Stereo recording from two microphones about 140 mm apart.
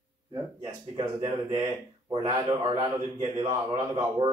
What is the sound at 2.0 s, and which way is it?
A man's voice, 30° right (ahead or behind).